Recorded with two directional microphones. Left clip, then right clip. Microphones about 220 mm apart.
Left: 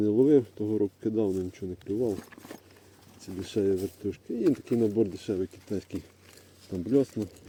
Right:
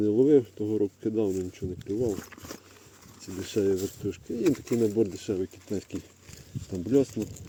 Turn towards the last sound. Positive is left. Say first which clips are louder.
# right 1 dB
turn(degrees=0)  # may be behind; listen again after turning